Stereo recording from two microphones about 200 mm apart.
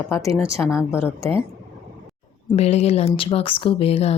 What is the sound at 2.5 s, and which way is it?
Speech, 30° left (ahead or behind).